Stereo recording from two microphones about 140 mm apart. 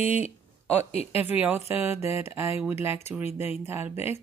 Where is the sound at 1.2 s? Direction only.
15° right (ahead or behind).